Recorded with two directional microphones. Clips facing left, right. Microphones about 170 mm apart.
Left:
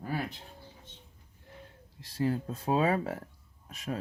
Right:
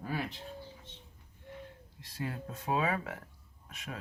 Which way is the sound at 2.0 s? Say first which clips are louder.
Left 9 dB; 35° left (ahead or behind).